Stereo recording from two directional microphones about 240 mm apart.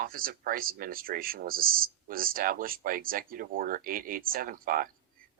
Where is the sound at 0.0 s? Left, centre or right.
Right.